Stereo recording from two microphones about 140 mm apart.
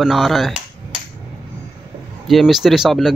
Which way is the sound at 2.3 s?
Centre (ahead or behind).